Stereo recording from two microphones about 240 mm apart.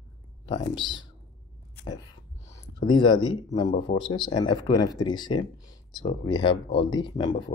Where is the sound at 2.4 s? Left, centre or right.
Centre.